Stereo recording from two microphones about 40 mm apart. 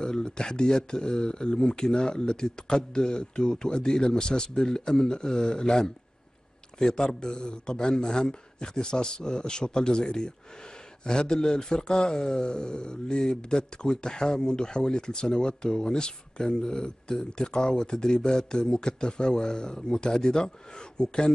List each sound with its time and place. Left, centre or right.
0.0 s speech: left